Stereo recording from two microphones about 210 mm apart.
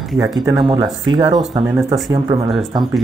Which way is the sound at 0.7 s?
20° right (ahead or behind).